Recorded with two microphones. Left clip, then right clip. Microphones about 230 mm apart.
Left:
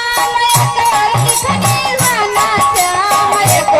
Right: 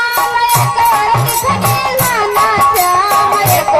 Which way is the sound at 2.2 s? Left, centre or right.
Left.